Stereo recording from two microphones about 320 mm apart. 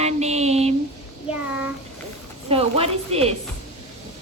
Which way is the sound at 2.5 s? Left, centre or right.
Centre.